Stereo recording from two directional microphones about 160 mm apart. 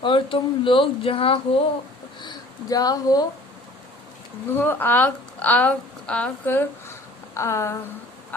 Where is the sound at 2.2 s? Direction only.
25° left (ahead or behind).